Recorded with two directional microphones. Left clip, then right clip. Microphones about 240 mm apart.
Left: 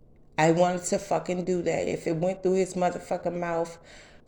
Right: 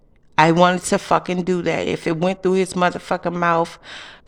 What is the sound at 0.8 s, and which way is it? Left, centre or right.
Speech, right.